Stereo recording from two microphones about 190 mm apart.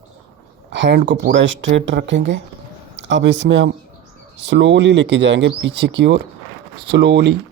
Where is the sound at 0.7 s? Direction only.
70° right (ahead or behind).